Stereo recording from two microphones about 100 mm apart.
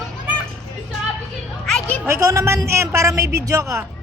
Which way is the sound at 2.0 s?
30° right (ahead or behind).